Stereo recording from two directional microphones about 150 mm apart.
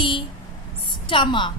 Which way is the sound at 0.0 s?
35° left (ahead or behind).